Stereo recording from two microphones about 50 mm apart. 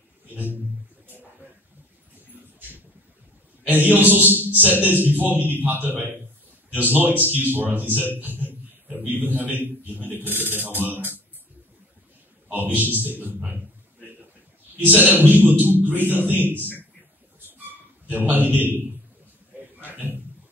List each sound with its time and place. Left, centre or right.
0.3 s a sound: right
3.6 s speech: right
12.4 s speech: right
15.0 s speech: right
18.1 s speech: right
19.9 s a sound: right